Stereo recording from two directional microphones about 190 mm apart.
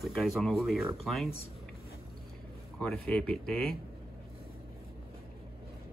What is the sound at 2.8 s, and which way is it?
Speech, 5° left (ahead or behind).